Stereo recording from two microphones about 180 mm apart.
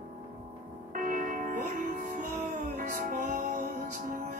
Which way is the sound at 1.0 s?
50° right (ahead or behind).